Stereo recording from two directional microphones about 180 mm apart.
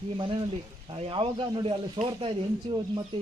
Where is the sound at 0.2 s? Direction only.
30° right (ahead or behind).